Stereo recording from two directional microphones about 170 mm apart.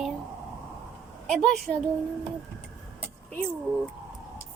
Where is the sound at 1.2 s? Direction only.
Centre (ahead or behind).